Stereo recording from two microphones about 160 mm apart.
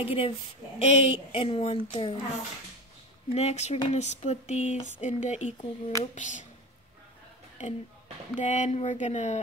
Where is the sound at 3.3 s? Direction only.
45° left (ahead or behind).